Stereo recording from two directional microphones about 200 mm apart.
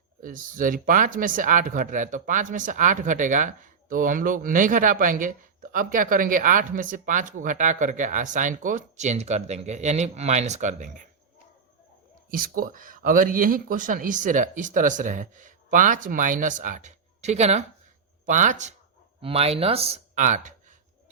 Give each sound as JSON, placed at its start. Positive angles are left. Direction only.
{"t": 0.2, "sound": "speech", "side_deg": -40}
{"t": 12.3, "sound": "speech", "side_deg": -45}